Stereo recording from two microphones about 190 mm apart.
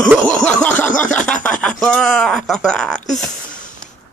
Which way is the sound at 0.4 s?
5° left (ahead or behind).